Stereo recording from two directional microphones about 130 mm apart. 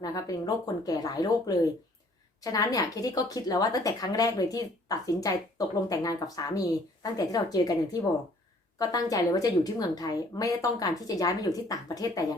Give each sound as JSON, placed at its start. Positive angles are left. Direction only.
{"t": 0.0, "sound": "a woman's voice", "side_deg": 30}
{"t": 8.8, "sound": "a woman's voice", "side_deg": 30}